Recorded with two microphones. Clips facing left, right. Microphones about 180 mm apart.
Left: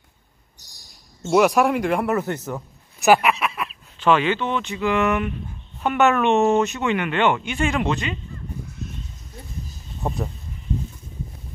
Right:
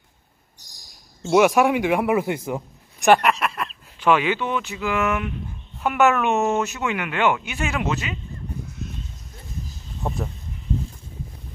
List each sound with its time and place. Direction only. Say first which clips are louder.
1.2 s speech: right 1 dB; centre (ahead or behind)
3.0 s a sound: even; 5° left (ahead or behind)
4.0 s speech: left 1 dB; 10° right (ahead or behind)
10.0 s speech: left 1 dB; centre (ahead or behind)